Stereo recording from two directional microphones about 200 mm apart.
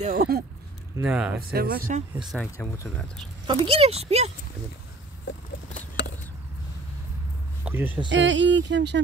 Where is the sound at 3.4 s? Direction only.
30° right (ahead or behind).